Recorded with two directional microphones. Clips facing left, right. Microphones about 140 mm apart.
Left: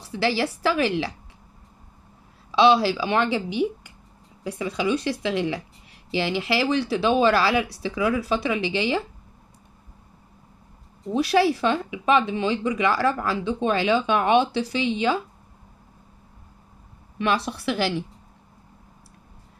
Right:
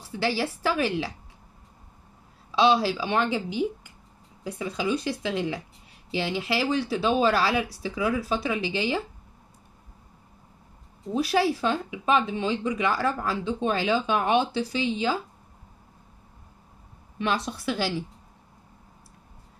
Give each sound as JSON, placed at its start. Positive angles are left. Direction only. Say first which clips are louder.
{"t": 0.0, "sound": "speech", "louder": "left 3 dB", "side_deg": 75}
{"t": 2.5, "sound": "a woman's voice", "louder": "left 4 dB", "side_deg": 75}
{"t": 4.5, "sound": "a woman's voice", "louder": "left 3 dB", "side_deg": 90}
{"t": 11.1, "sound": "speech", "louder": "left 4 dB", "side_deg": 75}
{"t": 17.2, "sound": "a woman's voice", "louder": "left 3 dB", "side_deg": 65}